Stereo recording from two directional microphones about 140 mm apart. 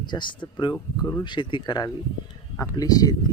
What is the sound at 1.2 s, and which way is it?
Speech, 35° left (ahead or behind).